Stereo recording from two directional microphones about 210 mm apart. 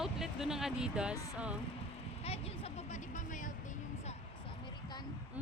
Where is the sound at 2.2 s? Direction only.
30° left (ahead or behind).